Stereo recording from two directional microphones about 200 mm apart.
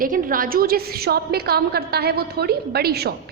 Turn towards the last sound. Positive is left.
turn(degrees=-50)  # may be behind; listen again after turning